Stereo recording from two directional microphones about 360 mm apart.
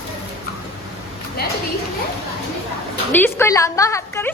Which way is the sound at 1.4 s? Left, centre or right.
Left.